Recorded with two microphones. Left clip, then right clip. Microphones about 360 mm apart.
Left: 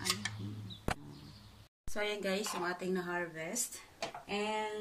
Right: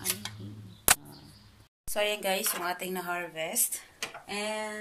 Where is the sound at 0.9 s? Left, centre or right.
Right.